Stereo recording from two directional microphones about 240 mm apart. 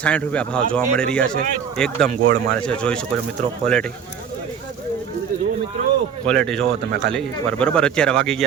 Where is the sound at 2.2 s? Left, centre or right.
Right.